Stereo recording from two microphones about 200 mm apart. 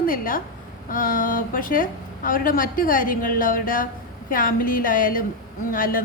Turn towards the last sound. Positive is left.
turn(degrees=45)  # may be behind; listen again after turning